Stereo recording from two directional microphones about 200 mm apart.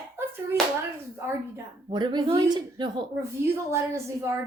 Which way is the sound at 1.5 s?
20° right (ahead or behind).